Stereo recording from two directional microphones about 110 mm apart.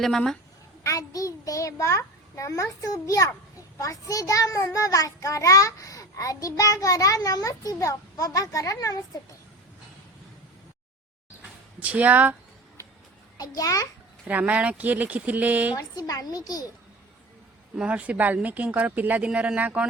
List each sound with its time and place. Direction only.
0.0 s a woman's voice: 5° left (ahead or behind)
0.9 s a child's voice: 30° left (ahead or behind)
11.8 s speech: 15° right (ahead or behind)
13.3 s a child's voice: 35° left (ahead or behind)
14.3 s speech: 15° right (ahead or behind)
15.7 s a child's voice: 35° left (ahead or behind)
17.7 s speech: 10° right (ahead or behind)